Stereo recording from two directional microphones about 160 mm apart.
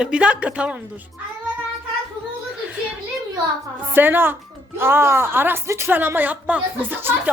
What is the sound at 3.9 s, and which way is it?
A woman's voice, 10° right (ahead or behind).